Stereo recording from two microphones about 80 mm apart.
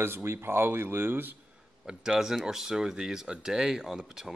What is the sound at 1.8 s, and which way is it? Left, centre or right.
Speech, centre.